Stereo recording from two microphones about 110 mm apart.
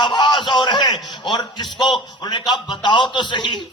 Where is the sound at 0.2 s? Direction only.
45° left (ahead or behind).